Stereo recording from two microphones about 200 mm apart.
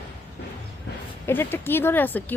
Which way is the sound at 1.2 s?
10° left (ahead or behind).